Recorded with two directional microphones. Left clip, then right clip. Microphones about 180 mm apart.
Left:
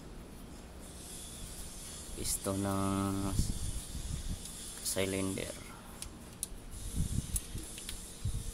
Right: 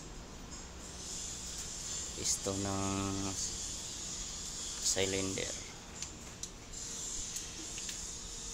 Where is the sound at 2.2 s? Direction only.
30° left (ahead or behind).